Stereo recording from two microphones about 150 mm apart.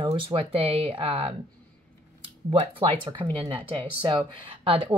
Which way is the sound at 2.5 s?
40° right (ahead or behind).